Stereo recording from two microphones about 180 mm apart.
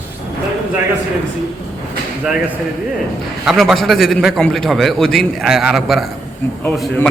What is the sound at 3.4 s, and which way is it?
A man's voice, centre (ahead or behind).